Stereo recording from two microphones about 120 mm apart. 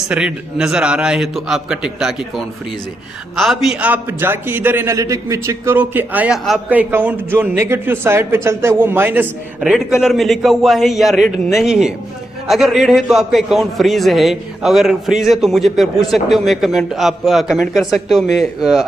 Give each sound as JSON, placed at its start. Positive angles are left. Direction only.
{"t": 0.1, "sound": "a man's voice", "side_deg": -5}
{"t": 9.6, "sound": "a man's voice", "side_deg": 0}